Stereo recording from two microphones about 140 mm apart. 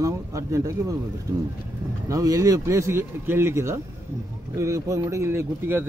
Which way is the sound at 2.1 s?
25° right (ahead or behind).